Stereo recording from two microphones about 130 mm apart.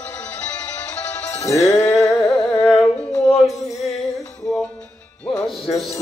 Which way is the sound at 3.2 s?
25° left (ahead or behind).